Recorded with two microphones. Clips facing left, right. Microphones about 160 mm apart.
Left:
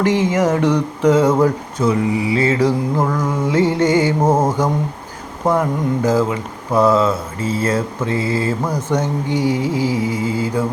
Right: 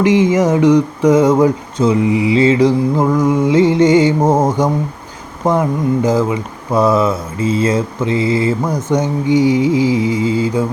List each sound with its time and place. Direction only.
0.0 s speech: 15° right (ahead or behind)
1.8 s mantra: 20° right (ahead or behind)
3.0 s speech: 15° right (ahead or behind)